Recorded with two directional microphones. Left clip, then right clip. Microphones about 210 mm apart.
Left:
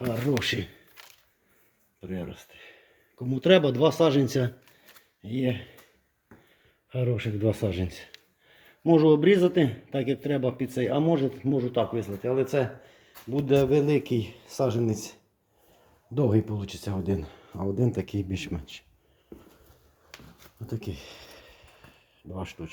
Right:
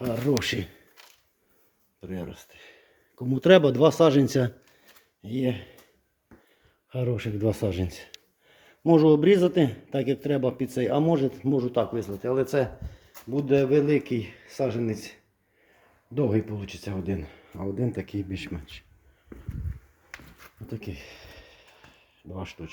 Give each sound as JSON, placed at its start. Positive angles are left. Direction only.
{"t": 0.1, "sound": "a man's voice", "side_deg": -5}
{"t": 2.0, "sound": "speech", "side_deg": 0}
{"t": 3.2, "sound": "speech", "side_deg": -25}
{"t": 5.2, "sound": "speech", "side_deg": -5}
{"t": 6.9, "sound": "a man's voice", "side_deg": -5}
{"t": 16.1, "sound": "speech", "side_deg": 5}
{"t": 20.7, "sound": "a sound", "side_deg": 0}